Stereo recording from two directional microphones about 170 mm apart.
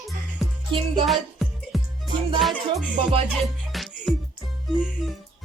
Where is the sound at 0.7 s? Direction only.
30° right (ahead or behind).